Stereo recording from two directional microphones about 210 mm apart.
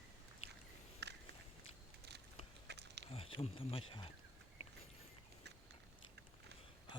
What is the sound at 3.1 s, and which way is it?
Speech, 25° left (ahead or behind).